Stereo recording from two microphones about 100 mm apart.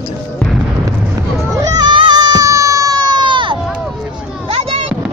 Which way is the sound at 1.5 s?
40° right (ahead or behind).